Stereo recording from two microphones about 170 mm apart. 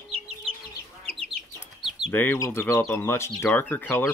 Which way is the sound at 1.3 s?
Centre (ahead or behind).